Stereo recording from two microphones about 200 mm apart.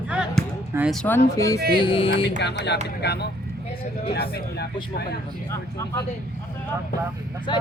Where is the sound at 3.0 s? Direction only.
55° left (ahead or behind).